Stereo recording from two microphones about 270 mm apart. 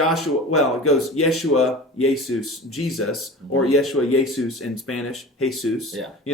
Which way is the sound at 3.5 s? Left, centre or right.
Left.